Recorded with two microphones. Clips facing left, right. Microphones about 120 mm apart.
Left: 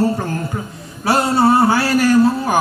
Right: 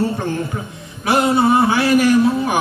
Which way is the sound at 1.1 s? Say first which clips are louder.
Even; 20° right (ahead or behind).